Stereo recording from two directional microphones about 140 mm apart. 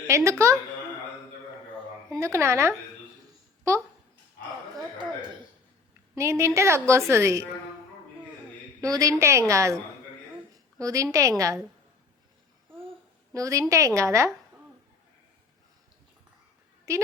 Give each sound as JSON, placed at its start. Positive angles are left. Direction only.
{"t": 0.1, "sound": "a woman's voice", "side_deg": -20}
{"t": 2.0, "sound": "a woman's voice", "side_deg": -20}
{"t": 6.1, "sound": "a woman's voice", "side_deg": -20}
{"t": 8.8, "sound": "a woman's voice", "side_deg": -25}
{"t": 10.8, "sound": "a woman's voice", "side_deg": -25}
{"t": 13.3, "sound": "a woman's voice", "side_deg": -25}
{"t": 16.9, "sound": "a woman's voice", "side_deg": -20}